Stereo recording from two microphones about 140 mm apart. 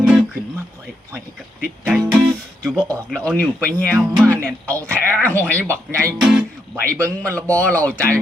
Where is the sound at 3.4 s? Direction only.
10° left (ahead or behind).